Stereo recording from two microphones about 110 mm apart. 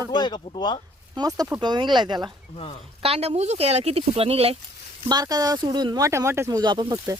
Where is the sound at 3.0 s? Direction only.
65° right (ahead or behind).